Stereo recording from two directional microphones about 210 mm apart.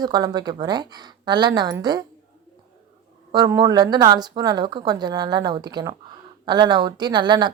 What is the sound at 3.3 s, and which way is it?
A woman's voice, 15° right (ahead or behind).